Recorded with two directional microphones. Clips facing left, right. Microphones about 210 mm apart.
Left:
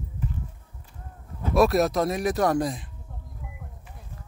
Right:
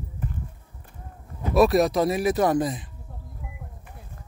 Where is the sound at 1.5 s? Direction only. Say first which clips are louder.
Right 2 dB; centre (ahead or behind).